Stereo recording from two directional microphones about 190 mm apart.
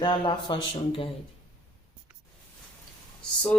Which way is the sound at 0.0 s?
25° left (ahead or behind).